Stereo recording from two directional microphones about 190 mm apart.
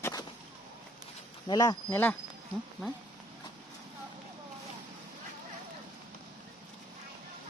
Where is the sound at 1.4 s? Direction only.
20° left (ahead or behind).